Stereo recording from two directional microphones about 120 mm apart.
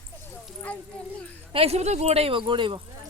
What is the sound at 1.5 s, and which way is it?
Speech, 55° right (ahead or behind).